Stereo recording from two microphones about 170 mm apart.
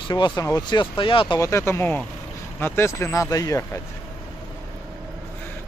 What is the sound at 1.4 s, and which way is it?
Speech, 15° left (ahead or behind).